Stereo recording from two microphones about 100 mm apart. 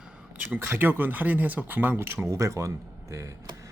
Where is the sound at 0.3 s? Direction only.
15° right (ahead or behind).